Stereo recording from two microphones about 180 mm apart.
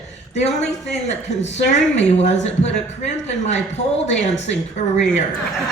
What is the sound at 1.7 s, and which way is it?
A man's voice, 40° left (ahead or behind).